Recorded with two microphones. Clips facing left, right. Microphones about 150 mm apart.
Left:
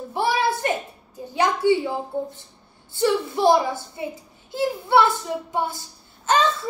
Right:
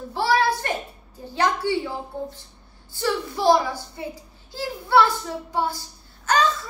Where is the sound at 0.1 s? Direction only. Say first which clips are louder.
Right 1 dB; 20° left (ahead or behind).